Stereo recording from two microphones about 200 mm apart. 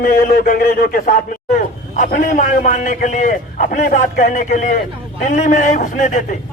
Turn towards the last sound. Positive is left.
turn(degrees=40)  # may be behind; listen again after turning